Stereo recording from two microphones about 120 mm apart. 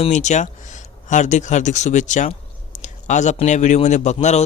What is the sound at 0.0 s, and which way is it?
Speech, 80° left.